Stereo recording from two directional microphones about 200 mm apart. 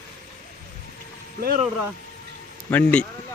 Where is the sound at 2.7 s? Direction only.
5° left (ahead or behind).